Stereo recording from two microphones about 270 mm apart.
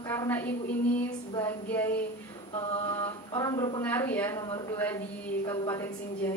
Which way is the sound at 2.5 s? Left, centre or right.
Left.